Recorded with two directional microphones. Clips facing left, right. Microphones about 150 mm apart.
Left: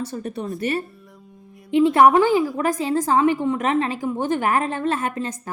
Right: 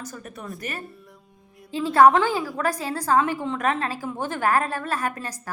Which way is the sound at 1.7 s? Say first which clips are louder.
Left 3 dB; 20° left (ahead or behind).